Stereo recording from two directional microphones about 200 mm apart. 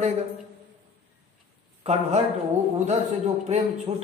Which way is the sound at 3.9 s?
15° right (ahead or behind).